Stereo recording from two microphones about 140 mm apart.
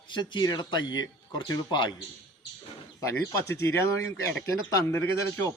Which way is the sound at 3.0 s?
20° left (ahead or behind).